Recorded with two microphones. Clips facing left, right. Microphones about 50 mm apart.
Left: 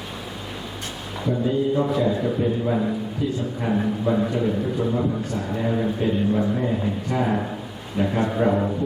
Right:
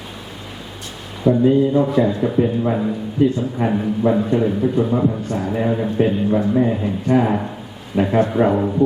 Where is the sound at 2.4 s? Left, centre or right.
Right.